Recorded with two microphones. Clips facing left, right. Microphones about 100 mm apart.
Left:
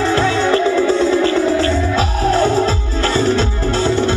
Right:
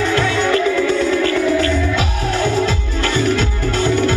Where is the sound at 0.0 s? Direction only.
30° left (ahead or behind).